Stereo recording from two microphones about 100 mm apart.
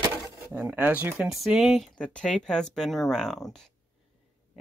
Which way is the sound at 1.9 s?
10° left (ahead or behind).